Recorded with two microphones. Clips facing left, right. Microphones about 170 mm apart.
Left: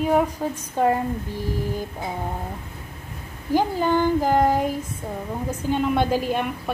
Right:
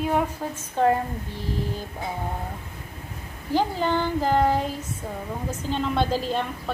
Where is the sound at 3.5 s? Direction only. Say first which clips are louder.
Left 3 dB; 10° left (ahead or behind).